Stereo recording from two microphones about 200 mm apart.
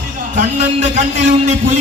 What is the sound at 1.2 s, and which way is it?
Speech, 35° right (ahead or behind).